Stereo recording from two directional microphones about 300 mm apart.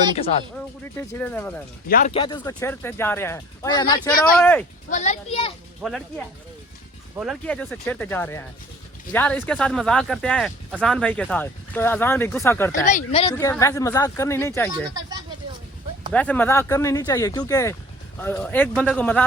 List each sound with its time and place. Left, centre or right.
0.2 s a child's voice: centre
0.5 s speech: centre
1.9 s speech: left; by 4.6 s centre
4.9 s a child's voice: left
5.8 s speech: centre
12.8 s a child's voice: left; by 14.7 s centre
16.1 s speech: centre